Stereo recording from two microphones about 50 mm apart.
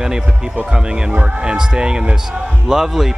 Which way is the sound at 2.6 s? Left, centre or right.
Centre.